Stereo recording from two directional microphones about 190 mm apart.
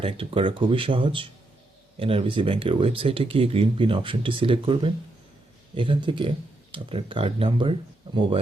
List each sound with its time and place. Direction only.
0.0 s speech: 30° right (ahead or behind)